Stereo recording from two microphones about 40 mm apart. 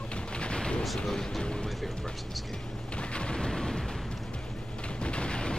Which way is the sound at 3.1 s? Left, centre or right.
Left.